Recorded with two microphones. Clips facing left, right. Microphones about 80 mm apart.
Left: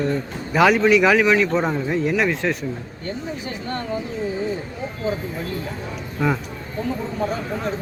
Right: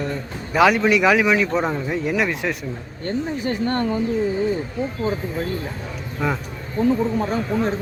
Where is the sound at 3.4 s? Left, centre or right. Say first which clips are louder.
Right 6 dB; right.